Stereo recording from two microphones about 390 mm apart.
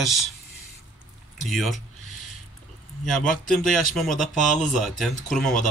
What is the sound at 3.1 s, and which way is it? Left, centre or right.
Speech, centre.